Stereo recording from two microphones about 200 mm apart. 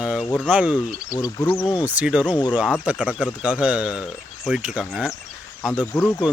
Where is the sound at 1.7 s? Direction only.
5° right (ahead or behind).